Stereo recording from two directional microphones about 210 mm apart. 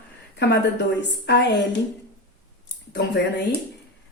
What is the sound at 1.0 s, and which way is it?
Speech, 55° left (ahead or behind).